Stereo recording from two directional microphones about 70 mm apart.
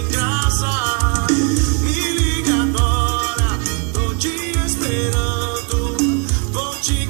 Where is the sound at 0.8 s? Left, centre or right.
Right.